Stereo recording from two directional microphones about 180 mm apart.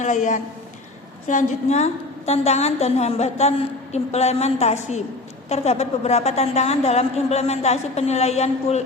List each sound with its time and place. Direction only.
0.0 s a woman's voice: 40° left (ahead or behind)